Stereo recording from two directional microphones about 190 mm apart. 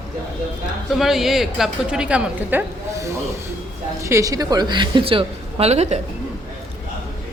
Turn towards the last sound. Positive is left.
turn(degrees=-35)  # may be behind; listen again after turning